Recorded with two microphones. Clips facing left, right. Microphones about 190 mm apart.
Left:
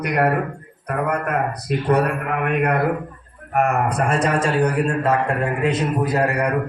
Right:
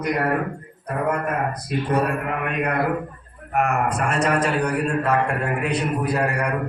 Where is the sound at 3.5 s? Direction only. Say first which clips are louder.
Left 2 dB; 40° left (ahead or behind).